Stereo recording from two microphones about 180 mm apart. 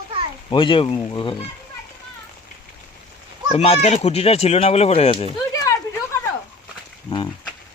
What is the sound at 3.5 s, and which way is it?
Speech, 35° left (ahead or behind).